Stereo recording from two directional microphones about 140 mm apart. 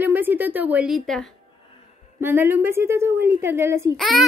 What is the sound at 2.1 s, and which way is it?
A woman's voice, 15° right (ahead or behind).